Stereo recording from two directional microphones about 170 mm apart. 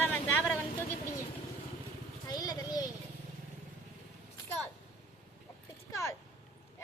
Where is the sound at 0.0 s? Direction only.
10° left (ahead or behind).